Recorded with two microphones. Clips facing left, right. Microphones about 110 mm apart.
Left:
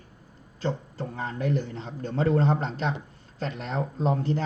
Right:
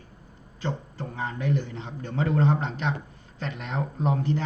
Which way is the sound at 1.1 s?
40° left (ahead or behind).